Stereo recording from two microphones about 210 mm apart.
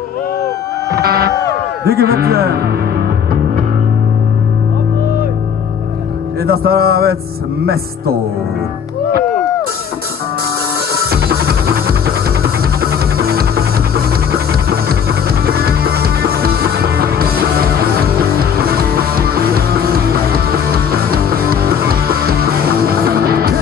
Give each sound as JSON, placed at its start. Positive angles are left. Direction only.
{"t": 1.0, "sound": "music", "side_deg": -45}
{"t": 6.4, "sound": "music", "side_deg": -45}
{"t": 11.1, "sound": "music", "side_deg": -45}
{"t": 12.9, "sound": "music", "side_deg": -45}
{"t": 15.4, "sound": "music", "side_deg": -45}
{"t": 18.8, "sound": "music", "side_deg": -45}
{"t": 21.5, "sound": "music", "side_deg": -45}